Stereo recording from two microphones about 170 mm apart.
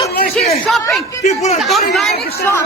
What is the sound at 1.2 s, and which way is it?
Speech, 40° left (ahead or behind).